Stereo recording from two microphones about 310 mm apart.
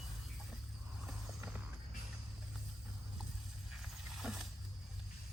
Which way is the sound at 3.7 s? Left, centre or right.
Centre.